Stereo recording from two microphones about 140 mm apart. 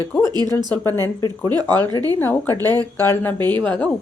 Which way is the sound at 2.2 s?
15° left (ahead or behind).